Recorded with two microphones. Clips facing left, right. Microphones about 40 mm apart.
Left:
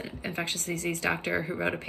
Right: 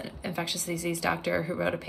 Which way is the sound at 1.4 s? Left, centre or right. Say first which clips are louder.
Right 1 dB; centre.